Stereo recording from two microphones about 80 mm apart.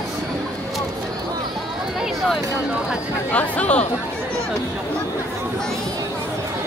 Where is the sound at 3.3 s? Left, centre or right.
Centre.